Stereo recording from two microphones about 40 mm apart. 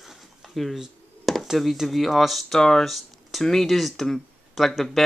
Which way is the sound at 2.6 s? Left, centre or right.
Centre.